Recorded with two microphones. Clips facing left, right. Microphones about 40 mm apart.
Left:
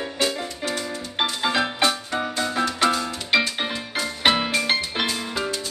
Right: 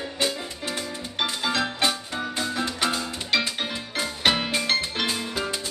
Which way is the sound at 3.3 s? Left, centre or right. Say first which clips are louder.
Left 4 dB; left.